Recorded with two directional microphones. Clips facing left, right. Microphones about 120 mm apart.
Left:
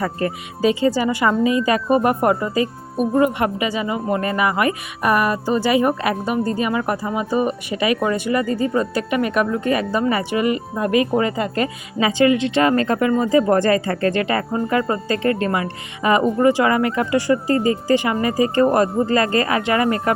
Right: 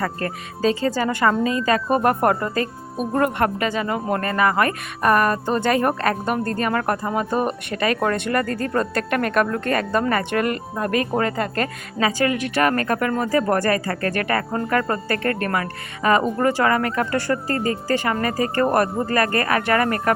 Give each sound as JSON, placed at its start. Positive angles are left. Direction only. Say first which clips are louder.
{"t": 0.0, "sound": "speech", "louder": "left 3 dB", "side_deg": 15}
{"t": 11.2, "sound": "speech", "louder": "left 2 dB", "side_deg": -50}
{"t": 11.9, "sound": "speech", "louder": "left 5 dB", "side_deg": 20}